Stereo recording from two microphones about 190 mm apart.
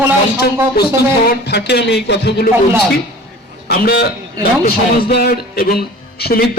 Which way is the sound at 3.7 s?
55° left (ahead or behind).